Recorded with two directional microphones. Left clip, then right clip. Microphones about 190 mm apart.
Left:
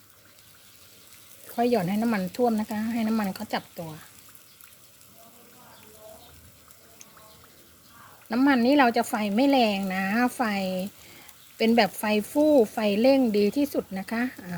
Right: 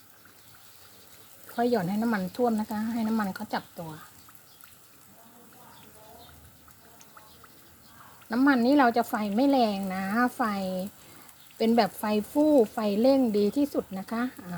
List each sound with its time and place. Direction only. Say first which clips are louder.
1.5 s speech: left 2 dB; 20° left (ahead or behind)
8.3 s speech: left 1 dB; 15° left (ahead or behind)